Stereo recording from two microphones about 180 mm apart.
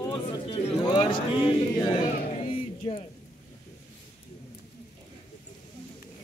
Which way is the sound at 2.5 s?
30° left (ahead or behind).